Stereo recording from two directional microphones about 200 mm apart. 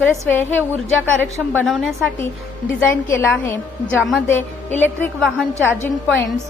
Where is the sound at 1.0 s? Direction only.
10° right (ahead or behind).